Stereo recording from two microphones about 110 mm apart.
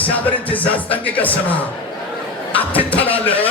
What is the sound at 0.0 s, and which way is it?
Music, 15° left (ahead or behind).